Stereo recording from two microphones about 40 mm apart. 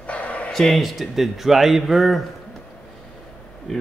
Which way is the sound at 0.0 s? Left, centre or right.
Left.